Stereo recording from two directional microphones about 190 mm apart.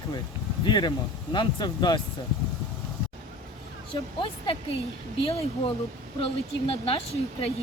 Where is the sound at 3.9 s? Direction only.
25° left (ahead or behind).